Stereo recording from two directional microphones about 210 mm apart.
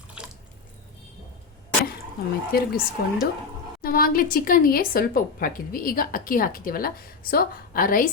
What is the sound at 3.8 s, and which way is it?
A woman's voice, 45° left (ahead or behind).